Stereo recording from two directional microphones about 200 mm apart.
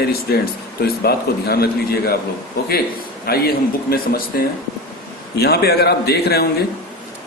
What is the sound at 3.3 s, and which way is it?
A man's voice, 50° left (ahead or behind).